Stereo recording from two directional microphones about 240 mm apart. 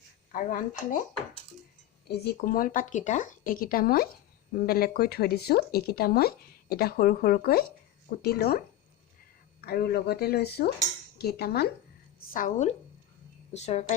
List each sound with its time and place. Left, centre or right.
0.3 s speech: left
2.0 s a woman's voice: left